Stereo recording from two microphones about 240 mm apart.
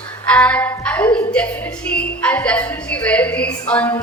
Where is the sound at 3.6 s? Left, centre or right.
Centre.